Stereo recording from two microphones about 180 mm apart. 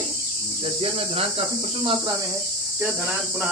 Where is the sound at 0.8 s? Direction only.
35° right (ahead or behind).